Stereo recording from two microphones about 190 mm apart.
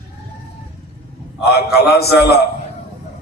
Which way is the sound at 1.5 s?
55° left (ahead or behind).